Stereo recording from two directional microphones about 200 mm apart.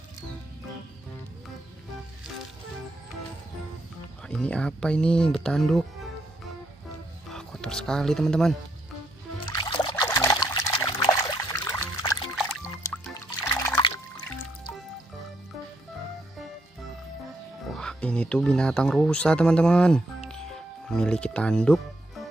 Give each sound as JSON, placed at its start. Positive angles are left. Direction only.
{"t": 4.3, "sound": "speech", "side_deg": 5}
{"t": 7.3, "sound": "speech", "side_deg": 5}
{"t": 9.5, "sound": "music", "side_deg": 25}
{"t": 10.0, "sound": "trickle", "side_deg": 15}
{"t": 12.8, "sound": "music", "side_deg": 5}
{"t": 13.1, "sound": "liquid", "side_deg": 15}
{"t": 17.7, "sound": "speech", "side_deg": 5}
{"t": 20.2, "sound": "music", "side_deg": 5}